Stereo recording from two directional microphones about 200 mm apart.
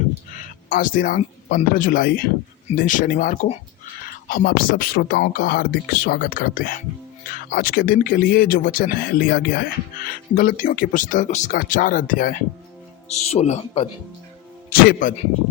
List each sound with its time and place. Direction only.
0.7 s speech: 40° left (ahead or behind)
4.3 s speech: 45° left (ahead or behind)
14.7 s speech: 45° left (ahead or behind)